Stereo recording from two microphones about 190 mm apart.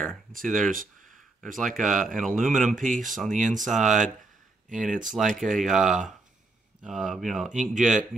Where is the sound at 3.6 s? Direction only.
Centre (ahead or behind).